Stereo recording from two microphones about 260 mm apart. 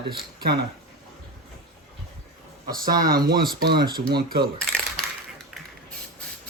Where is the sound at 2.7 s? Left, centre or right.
Right.